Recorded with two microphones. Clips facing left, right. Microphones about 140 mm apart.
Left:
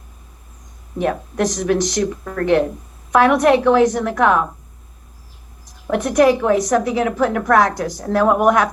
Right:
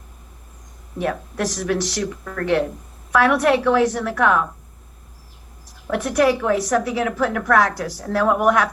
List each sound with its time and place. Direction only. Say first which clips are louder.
1.4 s a woman's voice: left 5 dB; 20° left (ahead or behind)
2.2 s a woman's voice: left 4 dB; 35° left (ahead or behind)
3.1 s a woman's voice: left 4 dB; 20° left (ahead or behind)
5.9 s a woman's voice: left 4 dB; 15° left (ahead or behind)